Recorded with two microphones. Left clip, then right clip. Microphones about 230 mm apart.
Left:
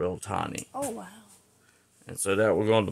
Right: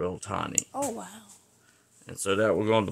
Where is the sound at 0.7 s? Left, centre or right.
Right.